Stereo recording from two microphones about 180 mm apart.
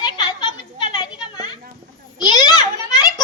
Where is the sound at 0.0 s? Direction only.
25° left (ahead or behind).